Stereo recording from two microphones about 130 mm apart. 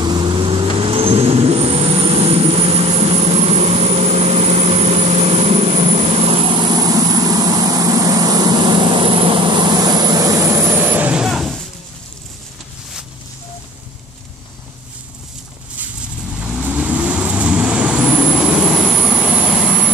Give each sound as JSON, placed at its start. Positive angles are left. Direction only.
{"t": 0.0, "sound": "vehicle", "side_deg": -35}
{"t": 16.3, "sound": "vehicle", "side_deg": -10}